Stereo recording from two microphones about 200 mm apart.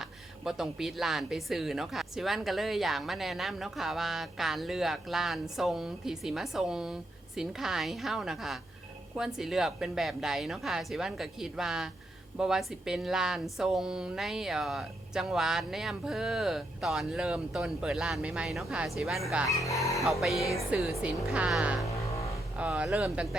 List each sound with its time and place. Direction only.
0.0 s speech: centre (ahead or behind)
19.5 s speech: 15° left (ahead or behind)
20.2 s speech: centre (ahead or behind)
21.8 s a sound: 15° left (ahead or behind)
22.5 s speech: 5° right (ahead or behind)